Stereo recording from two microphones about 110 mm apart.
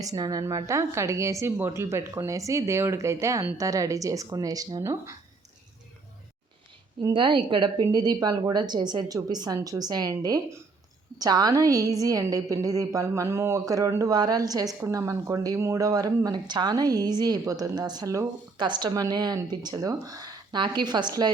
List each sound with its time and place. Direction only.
0.0 s a woman's voice: 35° right (ahead or behind)
7.1 s a woman's voice: 45° right (ahead or behind)
18.5 s a woman's voice: 40° right (ahead or behind)